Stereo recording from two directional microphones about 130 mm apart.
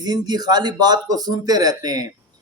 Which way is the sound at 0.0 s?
30° right (ahead or behind).